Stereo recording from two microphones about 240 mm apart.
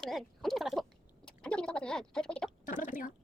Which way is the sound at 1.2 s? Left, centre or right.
Centre.